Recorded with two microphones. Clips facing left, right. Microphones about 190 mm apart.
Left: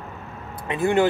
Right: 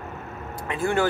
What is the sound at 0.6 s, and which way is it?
Speech, 20° left (ahead or behind).